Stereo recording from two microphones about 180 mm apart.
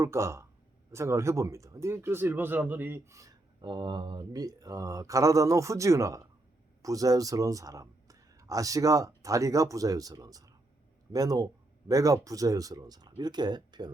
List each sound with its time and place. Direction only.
0.0 s speech: 15° right (ahead or behind)